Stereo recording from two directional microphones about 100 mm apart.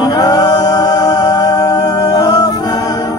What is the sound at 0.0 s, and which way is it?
Music, 40° left (ahead or behind).